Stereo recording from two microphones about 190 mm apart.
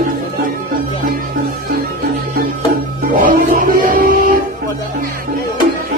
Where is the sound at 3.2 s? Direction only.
45° right (ahead or behind).